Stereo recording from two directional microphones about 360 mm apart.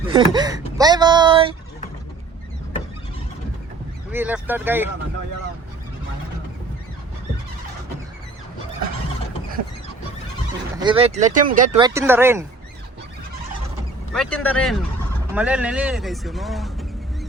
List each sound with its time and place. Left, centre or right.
0.1 s speech: centre
4.1 s speech: centre
10.8 s speech: centre
11.9 s speech: centre
14.1 s speech: centre